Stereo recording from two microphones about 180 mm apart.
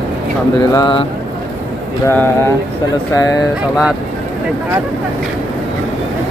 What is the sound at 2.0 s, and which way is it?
Speech, 15° left (ahead or behind).